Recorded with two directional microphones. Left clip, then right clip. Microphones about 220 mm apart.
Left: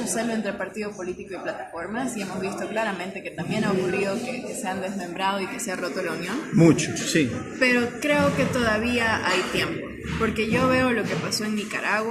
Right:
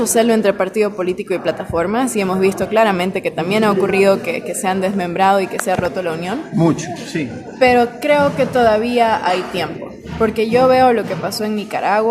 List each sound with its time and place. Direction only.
0.2 s a woman's voice: 50° right (ahead or behind)
6.6 s a man's voice: centre (ahead or behind)
7.6 s a woman's voice: 45° right (ahead or behind)